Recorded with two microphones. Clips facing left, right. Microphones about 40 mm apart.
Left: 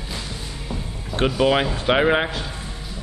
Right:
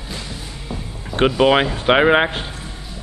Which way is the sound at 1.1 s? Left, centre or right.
Right.